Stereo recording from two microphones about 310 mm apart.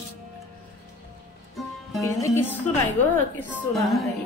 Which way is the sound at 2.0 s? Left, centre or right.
Centre.